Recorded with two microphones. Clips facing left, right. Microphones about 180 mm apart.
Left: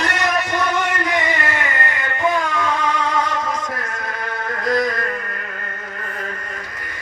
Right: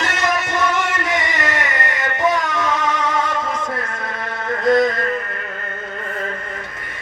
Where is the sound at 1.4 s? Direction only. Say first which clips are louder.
Right 1 dB; 90° right.